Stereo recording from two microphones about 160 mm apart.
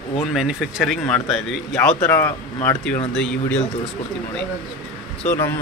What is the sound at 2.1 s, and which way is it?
Speech, 15° left (ahead or behind).